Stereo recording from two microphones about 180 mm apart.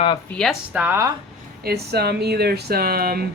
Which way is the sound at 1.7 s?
65° right (ahead or behind).